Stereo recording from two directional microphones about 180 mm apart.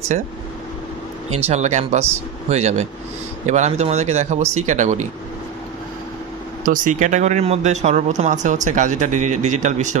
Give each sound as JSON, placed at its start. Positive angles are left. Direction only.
{"t": 1.5, "sound": "speech", "side_deg": -40}
{"t": 6.6, "sound": "speech", "side_deg": -50}